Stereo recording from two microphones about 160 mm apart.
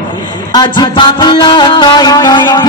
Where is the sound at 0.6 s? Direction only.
30° left (ahead or behind).